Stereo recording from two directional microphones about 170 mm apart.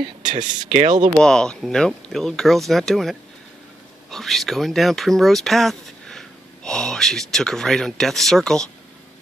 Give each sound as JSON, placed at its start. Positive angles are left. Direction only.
{"t": 0.0, "sound": "speech", "side_deg": -30}
{"t": 0.7, "sound": "speech", "side_deg": -50}
{"t": 1.0, "sound": "speech", "side_deg": 5}